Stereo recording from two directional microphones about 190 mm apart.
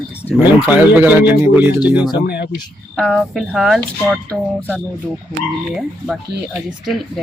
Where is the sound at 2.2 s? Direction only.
60° left (ahead or behind).